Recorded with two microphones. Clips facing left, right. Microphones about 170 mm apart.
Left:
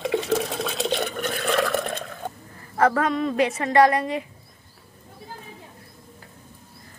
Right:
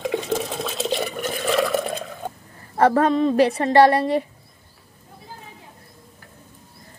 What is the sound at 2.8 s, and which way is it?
A woman's voice, 30° right (ahead or behind).